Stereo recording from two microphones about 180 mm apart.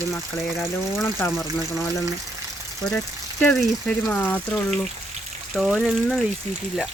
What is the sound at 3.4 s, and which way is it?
Speech, 5° left (ahead or behind).